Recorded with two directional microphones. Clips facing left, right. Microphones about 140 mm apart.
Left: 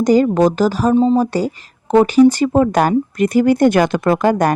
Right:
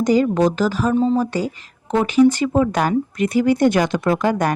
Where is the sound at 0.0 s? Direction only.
40° left (ahead or behind).